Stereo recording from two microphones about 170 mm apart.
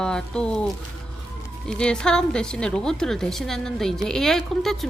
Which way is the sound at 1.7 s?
5° left (ahead or behind).